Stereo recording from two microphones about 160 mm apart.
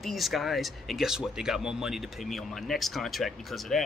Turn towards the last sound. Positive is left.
turn(degrees=0)  # may be behind; listen again after turning